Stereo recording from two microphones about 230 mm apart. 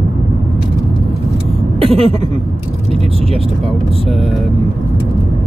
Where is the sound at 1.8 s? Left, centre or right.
Right.